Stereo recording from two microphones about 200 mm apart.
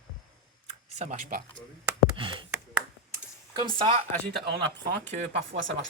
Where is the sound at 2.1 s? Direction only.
25° right (ahead or behind).